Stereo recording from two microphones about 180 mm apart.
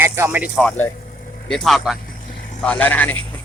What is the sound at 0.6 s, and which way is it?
Speech, 5° left (ahead or behind).